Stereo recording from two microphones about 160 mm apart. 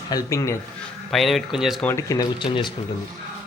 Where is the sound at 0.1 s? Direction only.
20° left (ahead or behind).